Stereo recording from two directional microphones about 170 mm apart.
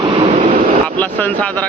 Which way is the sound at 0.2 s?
35° right (ahead or behind).